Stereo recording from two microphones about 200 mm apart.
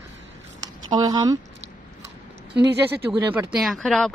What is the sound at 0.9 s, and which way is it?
Speech, 20° right (ahead or behind).